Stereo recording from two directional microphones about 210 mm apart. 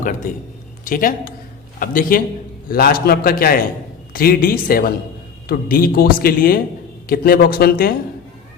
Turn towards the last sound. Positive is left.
turn(degrees=45)  # may be behind; listen again after turning